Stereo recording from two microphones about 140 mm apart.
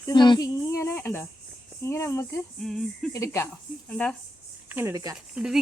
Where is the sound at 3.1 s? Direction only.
20° left (ahead or behind).